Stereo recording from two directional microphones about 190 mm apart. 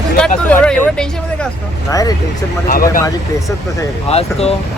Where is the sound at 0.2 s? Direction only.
5° left (ahead or behind).